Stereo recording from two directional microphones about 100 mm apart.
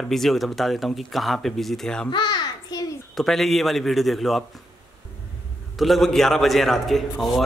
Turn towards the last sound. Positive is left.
turn(degrees=0)  # may be behind; listen again after turning